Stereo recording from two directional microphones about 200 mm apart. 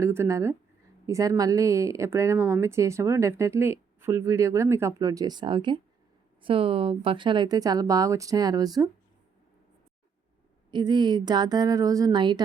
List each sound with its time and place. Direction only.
0.0 s speech: 15° right (ahead or behind)
10.7 s speech: 20° right (ahead or behind)